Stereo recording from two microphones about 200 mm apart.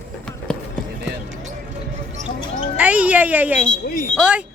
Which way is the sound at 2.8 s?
5° right (ahead or behind).